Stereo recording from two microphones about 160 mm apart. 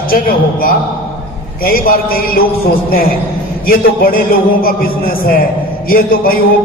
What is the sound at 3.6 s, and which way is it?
A man's voice, 65° left (ahead or behind).